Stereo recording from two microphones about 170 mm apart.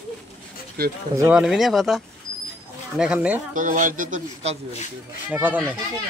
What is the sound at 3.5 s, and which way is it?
Speech, 50° right (ahead or behind).